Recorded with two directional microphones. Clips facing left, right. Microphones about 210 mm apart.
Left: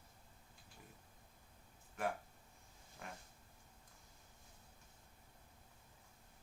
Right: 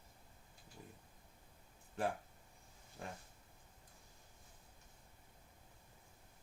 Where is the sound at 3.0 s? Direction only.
30° right (ahead or behind).